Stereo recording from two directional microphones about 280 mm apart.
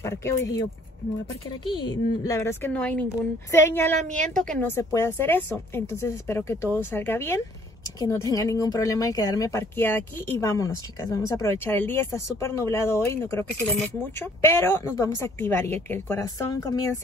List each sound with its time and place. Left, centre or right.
0.0 s speech: centre
1.7 s speech: centre
4.0 s a woman's voice: right
4.3 s speech: centre